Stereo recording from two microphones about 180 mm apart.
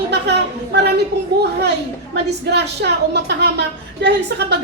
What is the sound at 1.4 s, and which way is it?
A woman's voice, 70° right (ahead or behind).